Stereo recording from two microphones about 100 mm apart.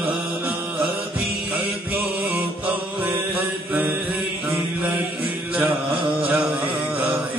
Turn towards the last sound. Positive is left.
turn(degrees=-15)  # may be behind; listen again after turning